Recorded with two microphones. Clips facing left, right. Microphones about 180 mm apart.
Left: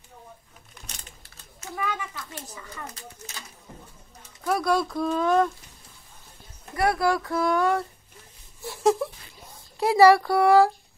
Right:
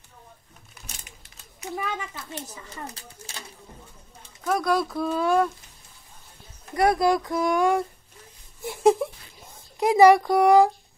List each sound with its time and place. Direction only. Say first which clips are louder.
0.8 s a sound: right 1 dB; 15° right (ahead or behind)
2.1 s speech: right 2 dB; 25° right (ahead or behind)
4.5 s speech: even; centre (ahead or behind)
6.7 s speech: right 3 dB; 20° right (ahead or behind)
8.6 s a sound: right 3 dB; 15° right (ahead or behind)
9.8 s speech: right 1 dB; 15° right (ahead or behind)